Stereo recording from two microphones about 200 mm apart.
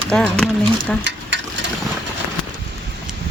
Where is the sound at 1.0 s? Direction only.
65° right (ahead or behind).